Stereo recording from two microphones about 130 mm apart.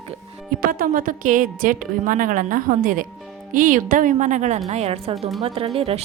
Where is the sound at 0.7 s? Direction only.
90° right; by 4.6 s 65° right (ahead or behind).